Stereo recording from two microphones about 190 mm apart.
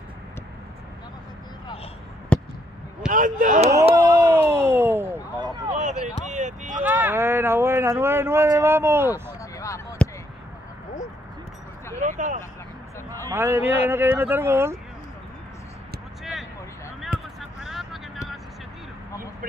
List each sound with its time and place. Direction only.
2.3 s fireworks: 5° left (ahead or behind)
3.1 s speech: 45° right (ahead or behind)
3.9 s a sound: 20° right (ahead or behind)
5.7 s a sound: 40° right (ahead or behind)
6.8 s speech: 10° right (ahead or behind)
9.4 s a sound: 15° left (ahead or behind)
10.0 s basketball bounce: 5° left (ahead or behind)
12.0 s vehicle: 40° right (ahead or behind)
13.3 s speech: 15° right (ahead or behind)
17.6 s vehicle: centre (ahead or behind)